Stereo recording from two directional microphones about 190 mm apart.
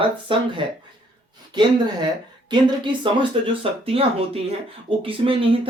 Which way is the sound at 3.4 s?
30° right (ahead or behind).